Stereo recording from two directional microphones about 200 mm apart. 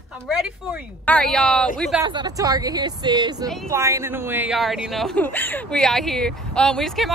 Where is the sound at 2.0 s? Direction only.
20° right (ahead or behind).